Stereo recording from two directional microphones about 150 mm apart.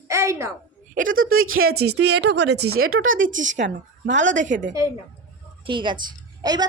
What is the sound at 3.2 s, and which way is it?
A woman's voice, 55° right (ahead or behind).